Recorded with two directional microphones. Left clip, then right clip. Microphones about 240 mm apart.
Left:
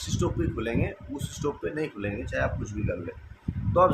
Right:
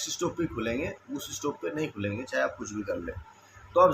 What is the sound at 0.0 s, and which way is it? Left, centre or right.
Speech, centre.